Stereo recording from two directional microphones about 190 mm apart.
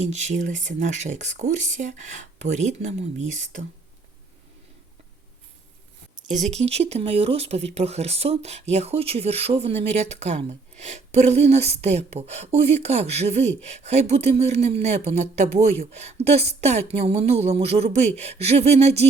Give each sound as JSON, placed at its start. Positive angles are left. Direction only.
{"t": 0.0, "sound": "speech", "side_deg": -35}
{"t": 6.4, "sound": "speech", "side_deg": -35}